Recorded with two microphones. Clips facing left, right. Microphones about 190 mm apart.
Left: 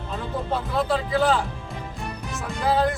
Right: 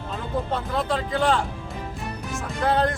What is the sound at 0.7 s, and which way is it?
Speech, 5° left (ahead or behind).